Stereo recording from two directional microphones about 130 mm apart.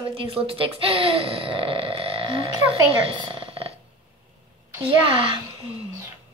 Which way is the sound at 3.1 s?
40° right (ahead or behind).